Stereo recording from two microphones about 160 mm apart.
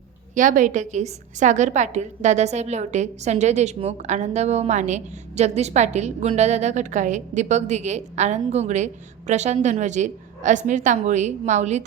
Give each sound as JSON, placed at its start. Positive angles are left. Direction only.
{"t": 0.3, "sound": "a woman's voice", "side_deg": -55}